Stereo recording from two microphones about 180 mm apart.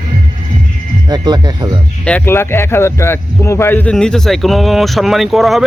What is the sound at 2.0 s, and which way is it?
Speech, 10° left (ahead or behind).